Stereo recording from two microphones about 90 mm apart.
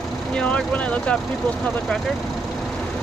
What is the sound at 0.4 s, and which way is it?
Speech, 15° left (ahead or behind).